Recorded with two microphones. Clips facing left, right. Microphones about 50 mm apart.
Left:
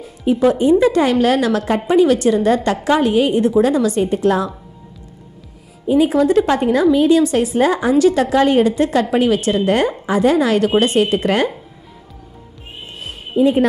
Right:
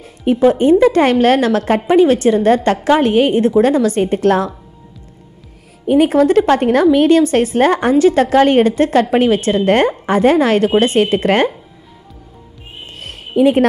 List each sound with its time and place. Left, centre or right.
0.2 s a woman's voice: right
5.9 s a woman's voice: right
7.9 s a woman's voice: right
13.0 s music: right